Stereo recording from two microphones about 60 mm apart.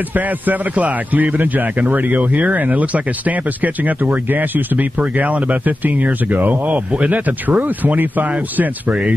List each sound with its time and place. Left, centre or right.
0.1 s a man's voice: right